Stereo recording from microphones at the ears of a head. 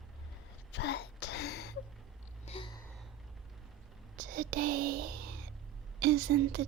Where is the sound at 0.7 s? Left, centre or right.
Left.